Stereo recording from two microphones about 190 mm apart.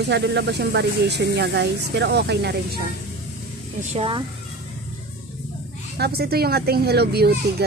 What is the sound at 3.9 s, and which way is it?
Speech, 30° right (ahead or behind).